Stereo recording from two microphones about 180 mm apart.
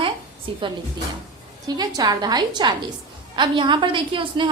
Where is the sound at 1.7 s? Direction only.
20° right (ahead or behind).